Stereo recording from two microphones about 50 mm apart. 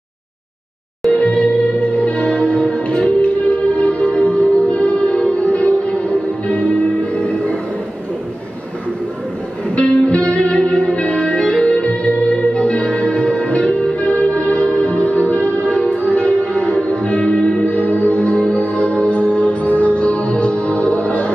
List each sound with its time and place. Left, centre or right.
1.1 s music: left
9.8 s music: left